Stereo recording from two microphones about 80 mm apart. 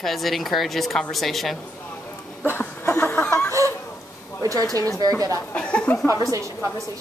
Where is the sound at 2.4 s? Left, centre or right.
Left.